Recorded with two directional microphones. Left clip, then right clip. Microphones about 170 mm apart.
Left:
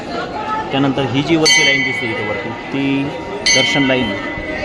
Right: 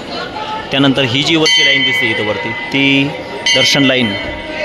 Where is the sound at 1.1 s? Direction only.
Centre (ahead or behind).